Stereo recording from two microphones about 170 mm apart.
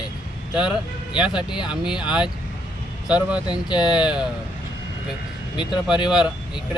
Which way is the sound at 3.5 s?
25° left (ahead or behind).